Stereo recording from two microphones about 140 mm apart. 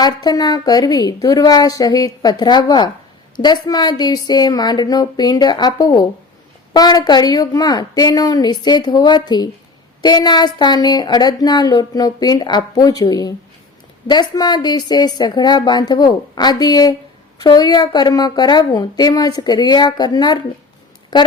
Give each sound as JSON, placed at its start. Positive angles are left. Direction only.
{"t": 0.0, "sound": "speech", "side_deg": 30}